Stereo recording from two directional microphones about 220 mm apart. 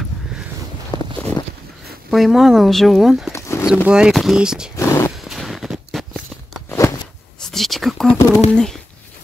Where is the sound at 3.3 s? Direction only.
15° left (ahead or behind).